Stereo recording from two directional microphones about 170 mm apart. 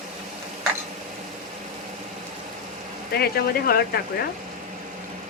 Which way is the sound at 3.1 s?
65° left (ahead or behind).